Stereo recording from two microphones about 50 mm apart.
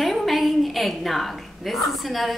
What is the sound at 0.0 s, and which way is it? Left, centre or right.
A woman's voice, centre.